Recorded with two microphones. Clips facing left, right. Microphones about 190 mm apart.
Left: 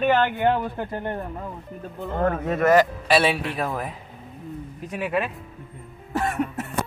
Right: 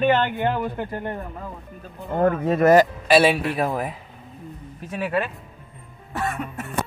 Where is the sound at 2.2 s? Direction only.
30° right (ahead or behind).